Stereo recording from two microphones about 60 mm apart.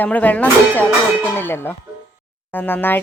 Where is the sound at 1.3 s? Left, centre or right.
Left.